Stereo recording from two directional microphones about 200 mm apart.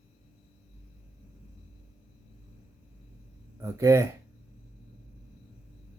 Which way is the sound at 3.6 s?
15° right (ahead or behind).